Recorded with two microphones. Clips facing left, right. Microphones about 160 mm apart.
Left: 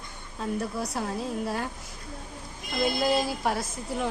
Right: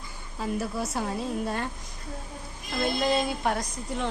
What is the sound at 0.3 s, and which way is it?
A woman's voice, 5° right (ahead or behind).